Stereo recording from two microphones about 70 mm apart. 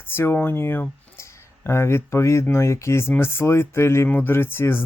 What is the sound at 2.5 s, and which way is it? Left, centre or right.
Speech, left.